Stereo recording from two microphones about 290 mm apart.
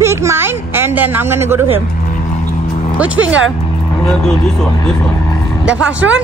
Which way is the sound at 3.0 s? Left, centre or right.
Centre.